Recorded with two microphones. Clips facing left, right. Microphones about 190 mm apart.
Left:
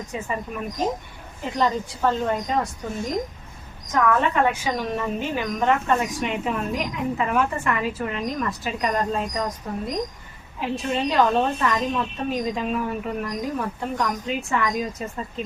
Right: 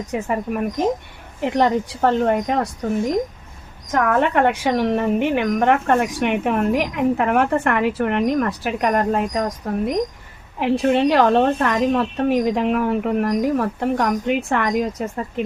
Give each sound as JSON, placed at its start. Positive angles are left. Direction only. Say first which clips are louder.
{"t": 0.1, "sound": "a woman's voice", "louder": "right 8 dB", "side_deg": -60}
{"t": 3.9, "sound": "a woman's voice", "louder": "right 3 dB", "side_deg": -55}